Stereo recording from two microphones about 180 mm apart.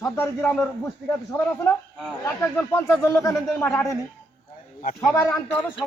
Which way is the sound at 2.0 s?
5° left (ahead or behind).